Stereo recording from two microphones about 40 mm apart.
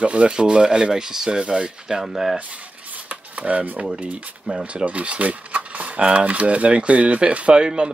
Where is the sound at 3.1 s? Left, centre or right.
Right.